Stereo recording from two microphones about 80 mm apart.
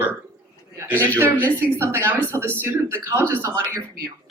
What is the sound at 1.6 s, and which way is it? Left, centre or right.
Speech, right.